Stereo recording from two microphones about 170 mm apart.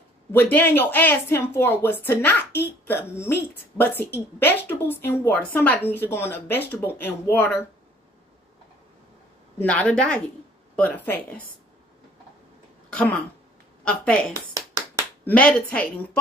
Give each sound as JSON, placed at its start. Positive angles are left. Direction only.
{"t": 0.3, "sound": "a woman's voice", "side_deg": 10}
{"t": 9.6, "sound": "a woman's voice", "side_deg": 10}
{"t": 14.3, "sound": "a sound", "side_deg": -20}
{"t": 15.2, "sound": "a woman's voice", "side_deg": 10}